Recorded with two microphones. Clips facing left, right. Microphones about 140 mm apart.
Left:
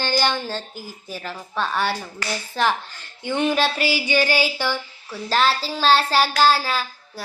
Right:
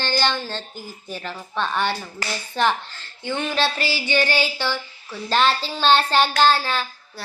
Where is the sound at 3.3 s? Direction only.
15° left (ahead or behind).